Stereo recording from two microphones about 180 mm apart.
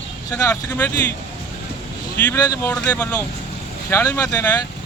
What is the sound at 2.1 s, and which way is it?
Speech, 10° left (ahead or behind).